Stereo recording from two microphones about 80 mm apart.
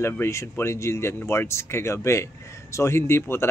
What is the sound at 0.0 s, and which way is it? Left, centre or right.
Speech, left.